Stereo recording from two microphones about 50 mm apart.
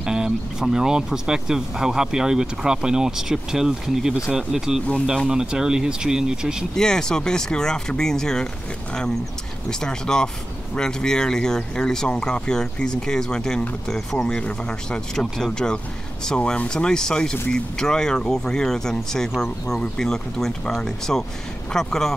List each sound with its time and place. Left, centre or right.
0.0 s speech: centre
6.7 s speech: centre
9.7 s speech: centre